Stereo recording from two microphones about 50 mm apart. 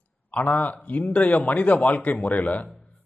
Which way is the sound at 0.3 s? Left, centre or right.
Left.